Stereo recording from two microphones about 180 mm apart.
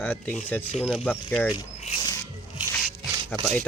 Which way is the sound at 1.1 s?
10° left (ahead or behind).